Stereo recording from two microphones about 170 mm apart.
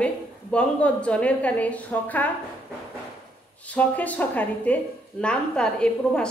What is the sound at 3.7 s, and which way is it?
A woman's voice, 10° left (ahead or behind).